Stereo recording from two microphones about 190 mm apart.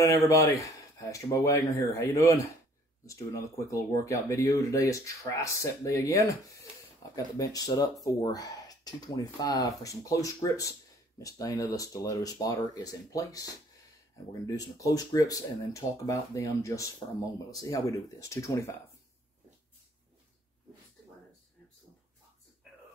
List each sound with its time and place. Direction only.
0.0 s speech: 15° left (ahead or behind)